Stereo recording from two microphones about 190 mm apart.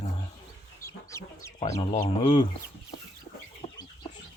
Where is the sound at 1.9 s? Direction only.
30° left (ahead or behind).